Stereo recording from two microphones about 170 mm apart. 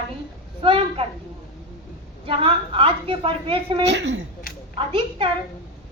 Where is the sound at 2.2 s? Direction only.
30° right (ahead or behind).